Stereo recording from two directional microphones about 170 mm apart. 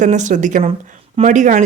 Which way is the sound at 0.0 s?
45° right (ahead or behind).